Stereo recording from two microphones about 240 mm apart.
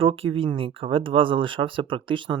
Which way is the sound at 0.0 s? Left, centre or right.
Right.